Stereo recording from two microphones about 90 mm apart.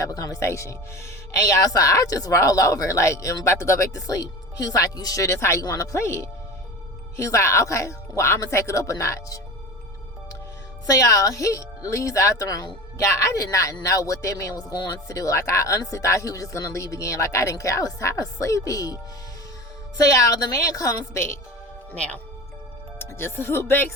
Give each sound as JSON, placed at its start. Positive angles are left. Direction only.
{"t": 0.0, "sound": "speech", "side_deg": 40}
{"t": 10.8, "sound": "speech", "side_deg": 40}
{"t": 20.0, "sound": "speech", "side_deg": 40}
{"t": 23.0, "sound": "speech", "side_deg": 25}